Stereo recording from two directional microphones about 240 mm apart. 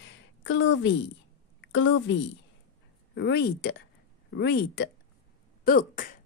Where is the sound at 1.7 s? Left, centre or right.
Left.